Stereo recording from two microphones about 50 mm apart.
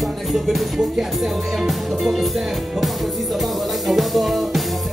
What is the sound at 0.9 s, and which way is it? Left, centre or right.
Speech, centre.